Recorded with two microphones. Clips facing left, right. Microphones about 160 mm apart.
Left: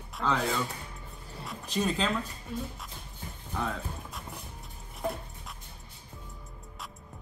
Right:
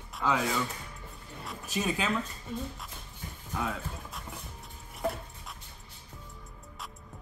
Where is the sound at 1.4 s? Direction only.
5° right (ahead or behind).